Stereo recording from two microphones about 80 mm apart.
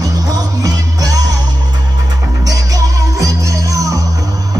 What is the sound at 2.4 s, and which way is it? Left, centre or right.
Music, right.